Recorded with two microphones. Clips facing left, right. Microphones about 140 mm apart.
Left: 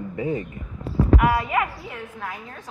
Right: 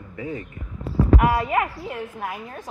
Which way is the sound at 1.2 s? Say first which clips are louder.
Right 1 dB; 30° right (ahead or behind).